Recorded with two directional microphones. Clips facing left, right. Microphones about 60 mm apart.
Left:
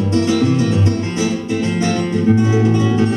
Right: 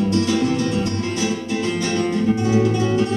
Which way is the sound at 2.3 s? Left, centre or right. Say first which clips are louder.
Left 3 dB; left.